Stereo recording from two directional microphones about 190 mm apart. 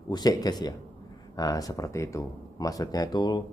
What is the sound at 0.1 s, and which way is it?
Speech, 20° left (ahead or behind).